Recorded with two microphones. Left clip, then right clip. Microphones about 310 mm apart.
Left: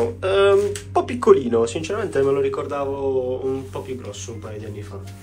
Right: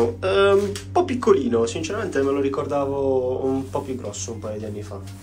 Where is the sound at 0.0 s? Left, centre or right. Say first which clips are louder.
Left 1 dB; centre.